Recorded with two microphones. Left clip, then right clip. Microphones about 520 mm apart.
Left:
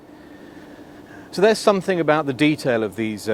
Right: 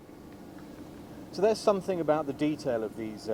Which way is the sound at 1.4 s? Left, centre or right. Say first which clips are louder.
Left 9 dB; left.